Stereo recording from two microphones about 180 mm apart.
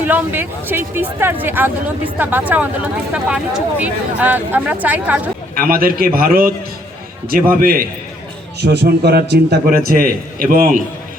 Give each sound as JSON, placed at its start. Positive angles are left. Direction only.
{"t": 0.0, "sound": "speech", "side_deg": -10}
{"t": 5.5, "sound": "a man's voice", "side_deg": -55}
{"t": 8.6, "sound": "a man's voice", "side_deg": -65}